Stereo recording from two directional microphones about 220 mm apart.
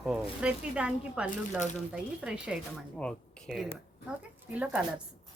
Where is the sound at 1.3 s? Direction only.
35° left (ahead or behind).